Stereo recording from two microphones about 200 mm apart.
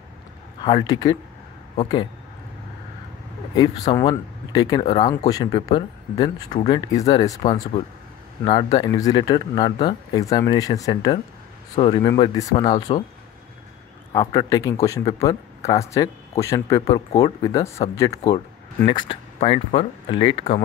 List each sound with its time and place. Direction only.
0.7 s speech: 20° left (ahead or behind)
3.5 s speech: 20° left (ahead or behind)
14.1 s a man's voice: 15° left (ahead or behind)
17.9 s a man's voice: 15° left (ahead or behind)